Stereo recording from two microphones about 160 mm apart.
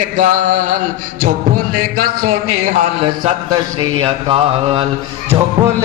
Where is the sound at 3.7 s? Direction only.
35° right (ahead or behind).